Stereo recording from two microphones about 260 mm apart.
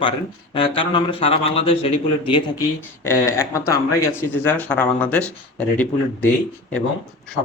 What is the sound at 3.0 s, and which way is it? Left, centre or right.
Speech, centre.